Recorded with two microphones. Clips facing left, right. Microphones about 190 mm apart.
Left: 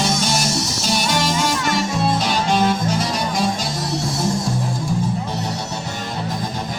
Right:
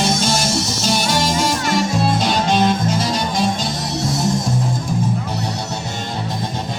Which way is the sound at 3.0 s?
25° right (ahead or behind).